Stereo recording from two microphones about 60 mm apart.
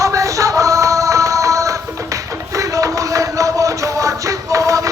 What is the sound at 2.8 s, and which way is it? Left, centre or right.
Music, right.